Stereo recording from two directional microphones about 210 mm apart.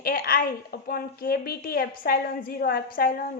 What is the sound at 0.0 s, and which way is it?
A woman's voice, 45° left (ahead or behind).